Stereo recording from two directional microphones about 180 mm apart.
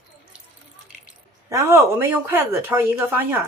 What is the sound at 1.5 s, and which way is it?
Speech, 15° right (ahead or behind).